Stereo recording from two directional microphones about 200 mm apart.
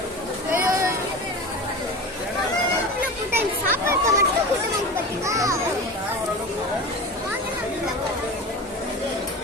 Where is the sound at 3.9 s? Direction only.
15° right (ahead or behind).